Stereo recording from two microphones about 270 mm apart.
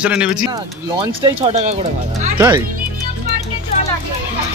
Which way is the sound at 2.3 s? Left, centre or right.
Centre.